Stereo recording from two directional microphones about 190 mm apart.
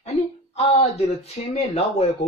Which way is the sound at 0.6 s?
35° left (ahead or behind).